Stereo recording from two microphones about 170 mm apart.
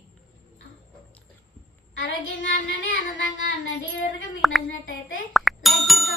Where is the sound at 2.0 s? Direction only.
90° left.